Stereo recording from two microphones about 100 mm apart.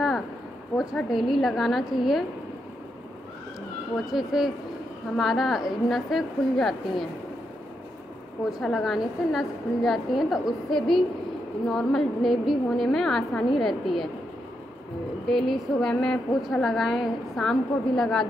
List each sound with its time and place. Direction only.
0.7 s a woman's voice: 20° left (ahead or behind)
1.1 s a woman's voice: centre (ahead or behind)
3.9 s a woman's voice: 5° right (ahead or behind)
8.5 s a woman's voice: centre (ahead or behind)
15.2 s a woman's voice: centre (ahead or behind)